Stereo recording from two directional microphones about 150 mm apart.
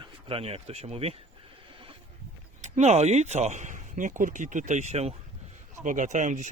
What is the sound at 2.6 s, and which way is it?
Speech, 50° right (ahead or behind).